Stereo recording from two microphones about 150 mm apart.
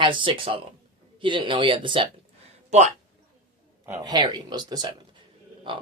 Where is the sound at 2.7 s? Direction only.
45° right (ahead or behind).